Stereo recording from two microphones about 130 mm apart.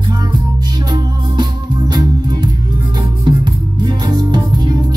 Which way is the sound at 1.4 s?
30° right (ahead or behind).